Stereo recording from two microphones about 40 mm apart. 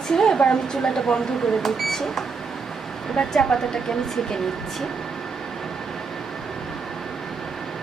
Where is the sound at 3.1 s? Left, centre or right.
Left.